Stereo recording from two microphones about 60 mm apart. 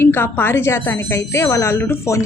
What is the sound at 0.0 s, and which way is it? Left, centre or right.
A woman's voice, left.